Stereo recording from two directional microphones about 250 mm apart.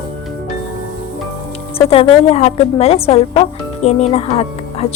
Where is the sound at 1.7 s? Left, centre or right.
Left.